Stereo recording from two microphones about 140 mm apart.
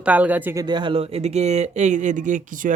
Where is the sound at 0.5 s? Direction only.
30° right (ahead or behind).